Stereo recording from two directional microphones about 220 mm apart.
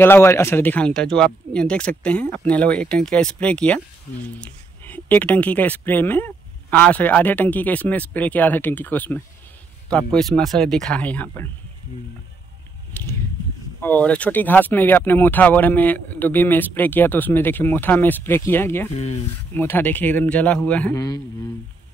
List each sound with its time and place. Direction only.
0.0 s speech: 10° left (ahead or behind)
12.9 s a sound: 10° left (ahead or behind)
13.7 s speech: 5° left (ahead or behind)